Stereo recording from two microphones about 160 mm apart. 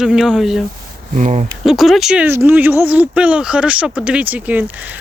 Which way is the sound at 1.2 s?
50° right (ahead or behind).